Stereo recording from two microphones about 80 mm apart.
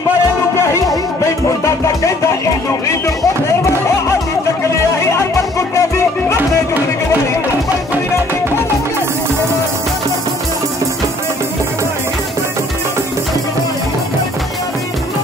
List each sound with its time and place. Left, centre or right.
1.2 s music: left
5.0 s music: left